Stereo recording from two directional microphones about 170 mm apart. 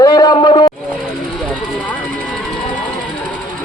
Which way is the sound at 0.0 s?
25° left (ahead or behind).